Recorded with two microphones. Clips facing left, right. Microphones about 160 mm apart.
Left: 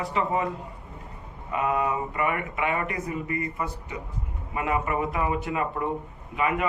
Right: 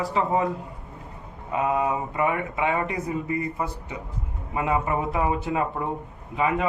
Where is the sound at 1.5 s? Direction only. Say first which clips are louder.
Right 2 dB; 25° right (ahead or behind).